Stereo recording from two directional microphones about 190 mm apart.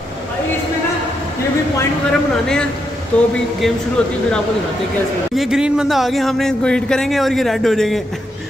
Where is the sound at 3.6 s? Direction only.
Centre (ahead or behind).